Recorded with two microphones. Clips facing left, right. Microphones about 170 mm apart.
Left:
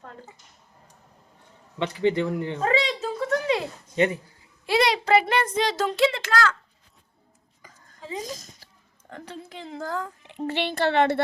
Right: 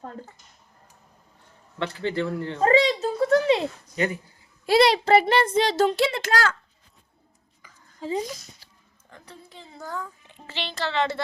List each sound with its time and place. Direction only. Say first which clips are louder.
1.8 s speech: left 4 dB; 15° left (ahead or behind)
2.6 s a sound: right 7 dB; 40° right (ahead or behind)
3.8 s speech: left 4 dB; 25° left (ahead or behind)
4.6 s a child's voice: right 4 dB; 35° right (ahead or behind)
7.6 s a sound: left 3 dB; 45° left (ahead or behind)
8.2 s a child's voice: right 2 dB; 45° left (ahead or behind)
9.0 s a woman's voice: left 8 dB; 80° left; by 11.2 s 60° left (ahead or behind)